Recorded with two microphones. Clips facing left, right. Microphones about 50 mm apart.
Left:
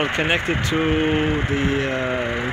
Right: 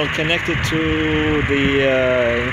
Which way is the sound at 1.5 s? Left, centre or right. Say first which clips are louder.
Right 6 dB; right.